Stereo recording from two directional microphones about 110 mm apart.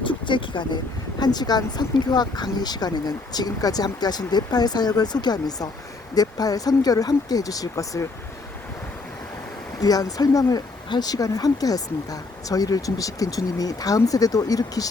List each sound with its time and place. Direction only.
0.3 s speech: 45° left (ahead or behind)
9.8 s speech: 35° left (ahead or behind)